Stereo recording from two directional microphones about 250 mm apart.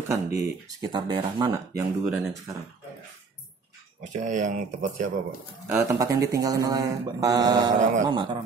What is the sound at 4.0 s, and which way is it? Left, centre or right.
Speech, right.